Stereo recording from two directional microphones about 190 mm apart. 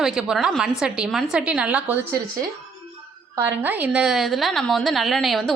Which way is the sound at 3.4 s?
10° right (ahead or behind).